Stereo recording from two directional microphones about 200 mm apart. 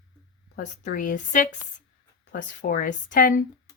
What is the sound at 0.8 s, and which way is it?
A woman's voice, 40° left (ahead or behind).